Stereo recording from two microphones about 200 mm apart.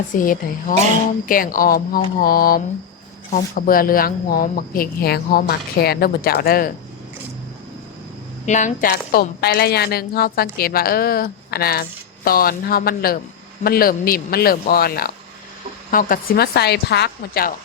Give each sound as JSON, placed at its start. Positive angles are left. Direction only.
{"t": 0.1, "sound": "a woman's voice", "side_deg": 45}
{"t": 8.4, "sound": "a woman's voice", "side_deg": 40}